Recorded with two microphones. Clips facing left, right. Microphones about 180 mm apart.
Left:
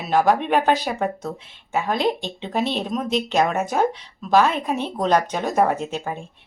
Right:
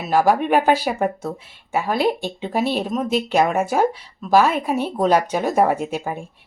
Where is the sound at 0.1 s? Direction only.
5° right (ahead or behind).